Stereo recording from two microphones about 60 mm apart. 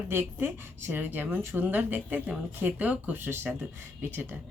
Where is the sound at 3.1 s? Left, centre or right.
Right.